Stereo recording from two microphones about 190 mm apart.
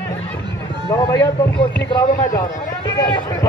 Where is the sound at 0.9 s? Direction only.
20° left (ahead or behind).